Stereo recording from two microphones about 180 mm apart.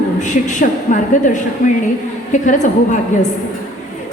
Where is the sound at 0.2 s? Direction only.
45° left (ahead or behind).